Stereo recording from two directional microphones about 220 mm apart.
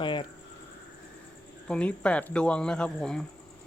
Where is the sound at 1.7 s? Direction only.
5° left (ahead or behind).